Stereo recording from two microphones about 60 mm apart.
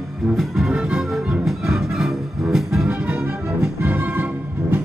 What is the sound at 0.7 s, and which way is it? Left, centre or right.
Music, centre.